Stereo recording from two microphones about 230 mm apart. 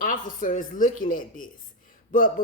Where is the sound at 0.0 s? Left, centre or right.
Left.